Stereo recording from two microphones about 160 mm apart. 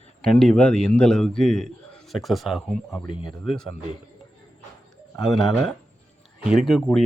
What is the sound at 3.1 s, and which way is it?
Speech, 35° left (ahead or behind).